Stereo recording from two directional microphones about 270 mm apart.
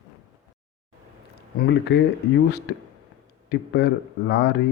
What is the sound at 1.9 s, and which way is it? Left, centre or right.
Speech, left.